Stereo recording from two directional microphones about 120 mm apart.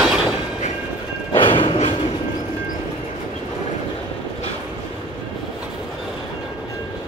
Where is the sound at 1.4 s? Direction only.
45° left (ahead or behind).